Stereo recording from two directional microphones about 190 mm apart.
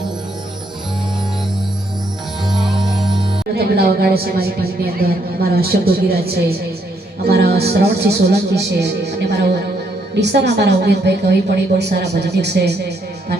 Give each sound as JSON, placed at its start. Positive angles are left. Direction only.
{"t": 2.5, "sound": "music", "side_deg": 0}
{"t": 3.5, "sound": "a woman's voice", "side_deg": -55}